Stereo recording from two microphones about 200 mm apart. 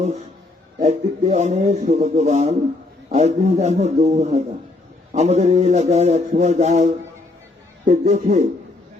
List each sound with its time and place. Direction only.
0.8 s speech: 35° right (ahead or behind)
7.9 s speech: 35° right (ahead or behind)